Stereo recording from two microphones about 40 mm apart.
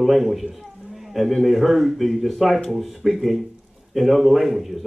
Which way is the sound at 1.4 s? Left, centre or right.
Centre.